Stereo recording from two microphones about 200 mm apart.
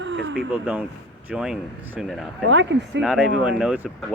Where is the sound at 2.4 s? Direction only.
60° right (ahead or behind).